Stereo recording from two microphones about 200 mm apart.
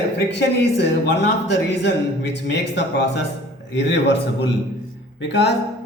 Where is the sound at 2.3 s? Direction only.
60° left (ahead or behind).